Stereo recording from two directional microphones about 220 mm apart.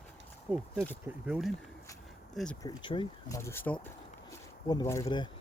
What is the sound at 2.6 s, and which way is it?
Speech, 20° left (ahead or behind).